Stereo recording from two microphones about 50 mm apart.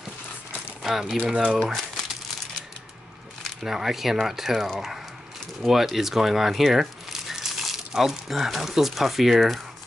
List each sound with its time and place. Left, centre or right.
1.2 s speech: right
1.6 s crumpling: centre
3.6 s speech: centre